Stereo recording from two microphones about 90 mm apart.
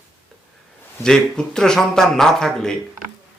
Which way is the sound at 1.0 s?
5° left (ahead or behind).